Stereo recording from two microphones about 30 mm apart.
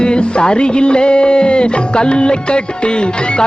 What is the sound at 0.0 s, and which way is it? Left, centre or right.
Music, left.